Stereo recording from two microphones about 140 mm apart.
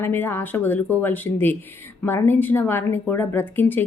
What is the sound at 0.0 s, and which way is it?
A woman's voice, 15° left (ahead or behind).